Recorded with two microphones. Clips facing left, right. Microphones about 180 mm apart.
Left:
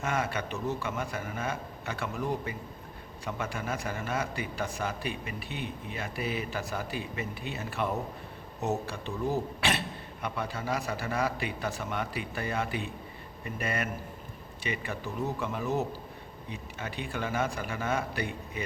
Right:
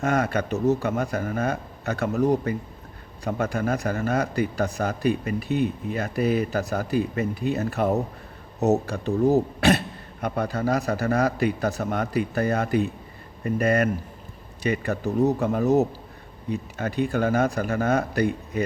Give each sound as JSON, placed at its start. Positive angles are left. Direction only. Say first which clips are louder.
{"t": 0.0, "sound": "a man's voice", "louder": "right 8 dB", "side_deg": -40}